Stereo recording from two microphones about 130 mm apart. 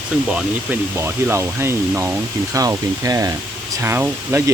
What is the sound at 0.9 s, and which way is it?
Speech, 20° right (ahead or behind).